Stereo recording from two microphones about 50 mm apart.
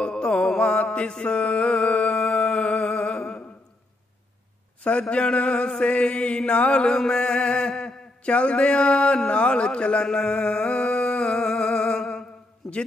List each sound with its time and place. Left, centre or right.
0.0 s music: centre
5.1 s mantra: left
10.0 s a sound: centre